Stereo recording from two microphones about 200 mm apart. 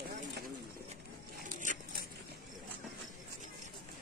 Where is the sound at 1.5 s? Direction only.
40° right (ahead or behind).